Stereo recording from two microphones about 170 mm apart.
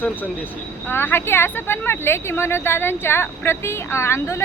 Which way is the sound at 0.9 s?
15° left (ahead or behind).